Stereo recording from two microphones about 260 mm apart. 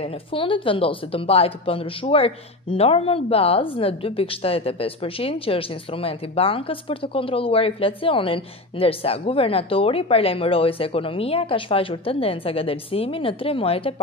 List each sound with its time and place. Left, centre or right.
0.0 s speech: left